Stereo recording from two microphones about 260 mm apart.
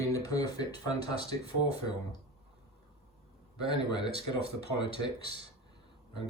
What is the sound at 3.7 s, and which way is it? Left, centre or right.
Speech, centre.